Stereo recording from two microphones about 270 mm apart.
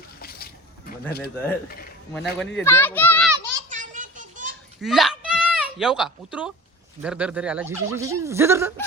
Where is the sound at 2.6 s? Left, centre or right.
Centre.